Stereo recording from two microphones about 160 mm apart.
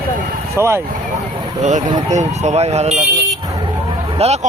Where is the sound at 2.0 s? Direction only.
45° right (ahead or behind).